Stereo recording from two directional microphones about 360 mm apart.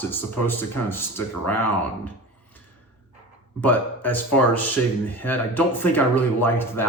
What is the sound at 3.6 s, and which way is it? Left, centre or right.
Speech, centre.